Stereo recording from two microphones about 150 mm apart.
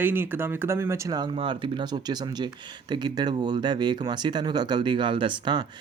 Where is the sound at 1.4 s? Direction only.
35° right (ahead or behind).